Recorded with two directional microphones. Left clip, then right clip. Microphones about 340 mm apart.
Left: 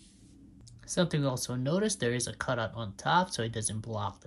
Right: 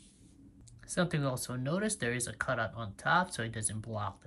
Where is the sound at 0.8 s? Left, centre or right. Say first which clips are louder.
Left 3 dB; centre.